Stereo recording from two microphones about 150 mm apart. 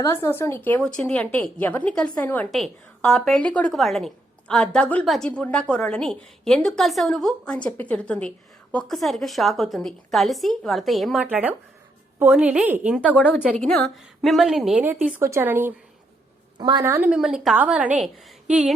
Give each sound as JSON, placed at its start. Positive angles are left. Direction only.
{"t": 0.0, "sound": "a woman's voice", "side_deg": 20}
{"t": 13.0, "sound": "a woman's voice", "side_deg": 10}
{"t": 15.0, "sound": "a woman's voice", "side_deg": -15}
{"t": 16.6, "sound": "a woman's voice", "side_deg": -30}
{"t": 16.8, "sound": "a woman's voice", "side_deg": -15}